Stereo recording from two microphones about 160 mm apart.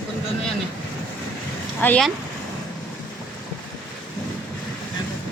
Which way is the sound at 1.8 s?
10° left (ahead or behind).